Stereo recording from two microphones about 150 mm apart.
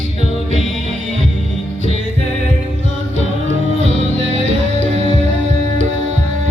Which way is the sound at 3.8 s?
50° right (ahead or behind).